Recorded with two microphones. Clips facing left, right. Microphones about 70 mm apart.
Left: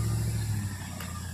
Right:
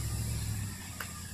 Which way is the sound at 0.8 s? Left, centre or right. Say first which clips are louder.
Left 4 dB; left.